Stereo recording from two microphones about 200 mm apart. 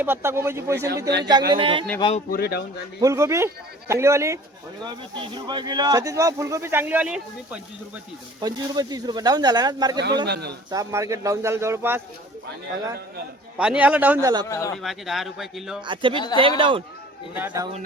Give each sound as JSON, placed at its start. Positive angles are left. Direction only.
{"t": 0.0, "sound": "speech", "side_deg": -10}
{"t": 2.0, "sound": "speech", "side_deg": 25}
{"t": 2.3, "sound": "speech", "side_deg": 50}
{"t": 3.0, "sound": "speech", "side_deg": -15}
{"t": 8.4, "sound": "speech", "side_deg": -20}
{"t": 10.2, "sound": "a man's voice", "side_deg": -55}
{"t": 10.7, "sound": "speech", "side_deg": -15}
{"t": 13.6, "sound": "speech", "side_deg": -5}
{"t": 14.4, "sound": "speech", "side_deg": 15}
{"t": 14.8, "sound": "speech", "side_deg": 0}
{"t": 15.9, "sound": "speech", "side_deg": -25}
{"t": 17.3, "sound": "speech", "side_deg": -10}